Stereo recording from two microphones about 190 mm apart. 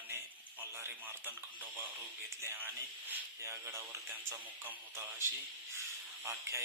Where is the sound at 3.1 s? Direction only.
15° right (ahead or behind).